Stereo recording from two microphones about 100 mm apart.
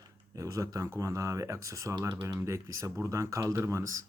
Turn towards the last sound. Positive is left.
turn(degrees=-30)  # may be behind; listen again after turning